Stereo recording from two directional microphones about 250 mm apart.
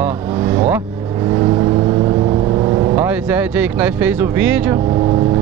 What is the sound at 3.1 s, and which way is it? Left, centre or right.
Speech, centre.